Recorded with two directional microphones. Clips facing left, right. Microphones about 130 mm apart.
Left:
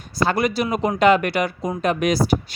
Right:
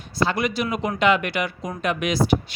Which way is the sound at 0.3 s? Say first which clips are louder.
Left 3 dB; 40° left (ahead or behind).